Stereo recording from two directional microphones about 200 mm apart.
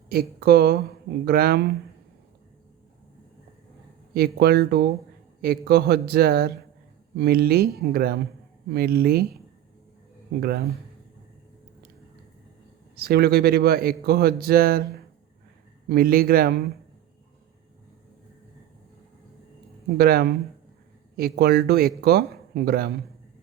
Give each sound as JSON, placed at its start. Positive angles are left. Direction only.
{"t": 0.1, "sound": "speech", "side_deg": -50}
{"t": 4.4, "sound": "speech", "side_deg": -55}
{"t": 13.0, "sound": "speech", "side_deg": -50}
{"t": 15.9, "sound": "speech", "side_deg": -50}
{"t": 20.0, "sound": "speech", "side_deg": -50}